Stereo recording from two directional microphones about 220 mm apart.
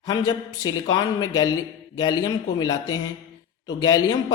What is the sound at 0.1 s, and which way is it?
Speech, 15° left (ahead or behind).